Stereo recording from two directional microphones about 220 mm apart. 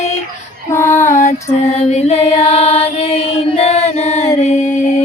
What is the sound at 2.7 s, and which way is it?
Chant, 25° left (ahead or behind).